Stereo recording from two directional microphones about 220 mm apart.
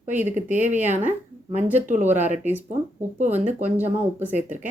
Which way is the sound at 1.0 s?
10° right (ahead or behind).